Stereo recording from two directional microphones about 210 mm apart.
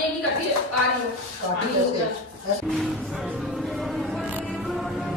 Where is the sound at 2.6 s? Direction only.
Centre (ahead or behind).